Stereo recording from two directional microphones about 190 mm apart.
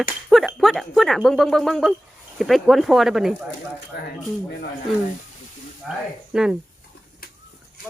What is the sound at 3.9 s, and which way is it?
Speech, 60° left (ahead or behind).